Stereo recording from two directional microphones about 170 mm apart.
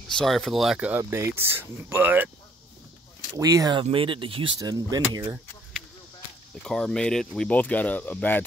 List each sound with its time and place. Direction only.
0.1 s speech: 5° left (ahead or behind)
3.3 s speech: 20° right (ahead or behind)
5.2 s a sound: 5° right (ahead or behind)
6.6 s speech: 5° left (ahead or behind)